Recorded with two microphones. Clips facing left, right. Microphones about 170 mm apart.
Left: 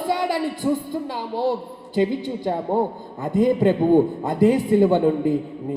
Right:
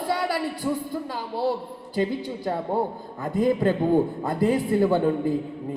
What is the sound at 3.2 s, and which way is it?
A man's voice, 20° left (ahead or behind).